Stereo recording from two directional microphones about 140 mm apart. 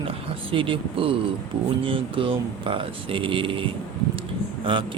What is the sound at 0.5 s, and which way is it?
Speech, 40° right (ahead or behind).